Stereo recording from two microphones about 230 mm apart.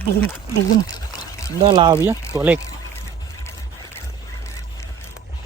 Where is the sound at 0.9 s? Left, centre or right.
Centre.